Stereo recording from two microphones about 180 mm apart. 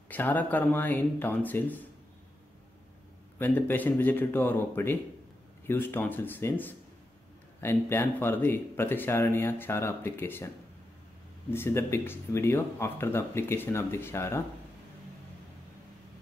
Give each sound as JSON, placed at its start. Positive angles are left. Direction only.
{"t": 0.1, "sound": "speech", "side_deg": 10}
{"t": 3.3, "sound": "speech", "side_deg": 10}
{"t": 11.5, "sound": "speech", "side_deg": 15}